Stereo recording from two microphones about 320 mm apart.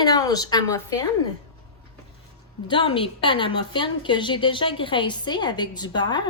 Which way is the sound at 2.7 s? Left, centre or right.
Centre.